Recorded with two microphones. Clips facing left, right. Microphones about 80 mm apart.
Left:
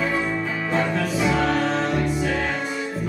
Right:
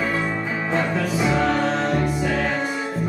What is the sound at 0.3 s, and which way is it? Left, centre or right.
Music, right.